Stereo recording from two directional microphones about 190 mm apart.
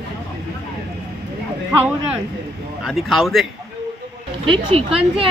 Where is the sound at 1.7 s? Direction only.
10° right (ahead or behind).